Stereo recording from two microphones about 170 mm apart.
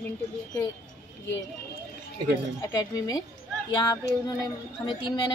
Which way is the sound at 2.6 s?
20° left (ahead or behind).